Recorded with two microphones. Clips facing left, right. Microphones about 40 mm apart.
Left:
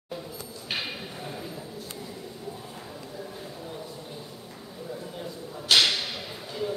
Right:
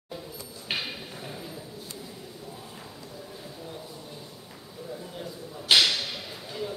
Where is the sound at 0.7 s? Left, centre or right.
Centre.